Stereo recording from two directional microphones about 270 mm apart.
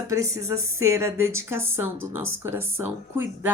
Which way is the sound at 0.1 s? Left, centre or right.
Centre.